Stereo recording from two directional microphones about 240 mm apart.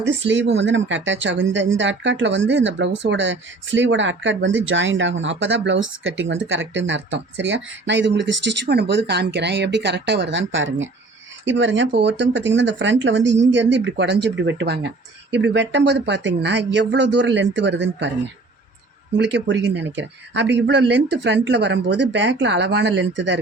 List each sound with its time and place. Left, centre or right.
0.3 s speech: right
19.1 s speech: right